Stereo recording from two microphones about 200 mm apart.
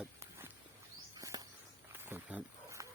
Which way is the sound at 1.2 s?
20° right (ahead or behind).